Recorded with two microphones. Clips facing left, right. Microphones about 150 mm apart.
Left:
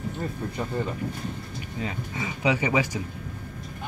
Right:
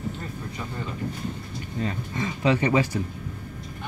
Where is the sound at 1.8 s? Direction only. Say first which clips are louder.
Right 3 dB; 5° left (ahead or behind).